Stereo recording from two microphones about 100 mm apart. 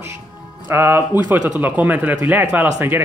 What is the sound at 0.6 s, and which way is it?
Speech, 25° right (ahead or behind).